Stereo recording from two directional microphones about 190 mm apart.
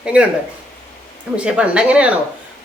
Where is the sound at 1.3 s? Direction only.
5° right (ahead or behind).